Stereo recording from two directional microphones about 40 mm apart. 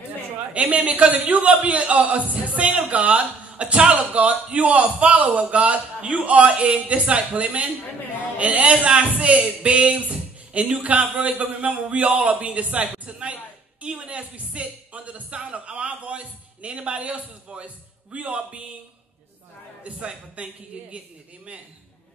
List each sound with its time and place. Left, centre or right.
0.5 s a man's voice: right
20.4 s a man's voice: right